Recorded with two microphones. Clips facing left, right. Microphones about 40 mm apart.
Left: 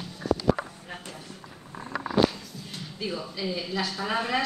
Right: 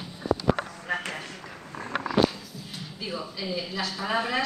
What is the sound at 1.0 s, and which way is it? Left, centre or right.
Speech, right.